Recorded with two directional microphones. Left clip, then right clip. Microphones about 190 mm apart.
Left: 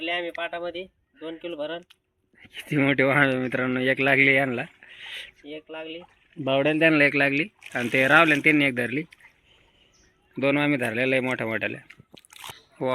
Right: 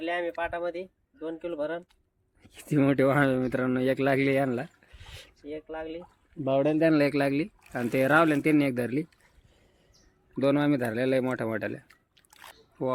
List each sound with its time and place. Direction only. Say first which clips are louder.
0.0 s speech: left 1 dB; centre (ahead or behind)
10.3 s speech: left 2 dB; 10° right (ahead or behind)
11.9 s biting: left 10 dB; 35° right (ahead or behind)